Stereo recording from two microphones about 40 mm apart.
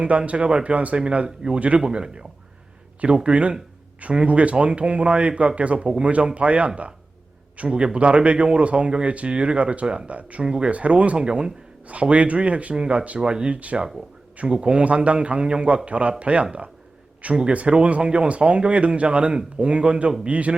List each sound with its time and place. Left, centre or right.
0.0 s a man's voice: right
1.8 s speech: right
3.2 s a man's voice: right
9.8 s speech: centre
10.1 s a man's voice: right
11.3 s speech: right
11.9 s a man's voice: right
12.8 s a man's voice: right